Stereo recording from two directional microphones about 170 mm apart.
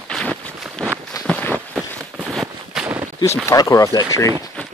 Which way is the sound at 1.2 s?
5° left (ahead or behind).